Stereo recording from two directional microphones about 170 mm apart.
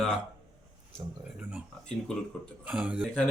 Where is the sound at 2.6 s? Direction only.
5° right (ahead or behind).